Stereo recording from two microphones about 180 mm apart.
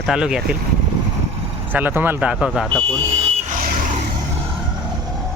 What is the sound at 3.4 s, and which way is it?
Vehicle, 45° right (ahead or behind).